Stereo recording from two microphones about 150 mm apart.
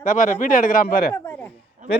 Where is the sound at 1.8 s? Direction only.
55° right (ahead or behind).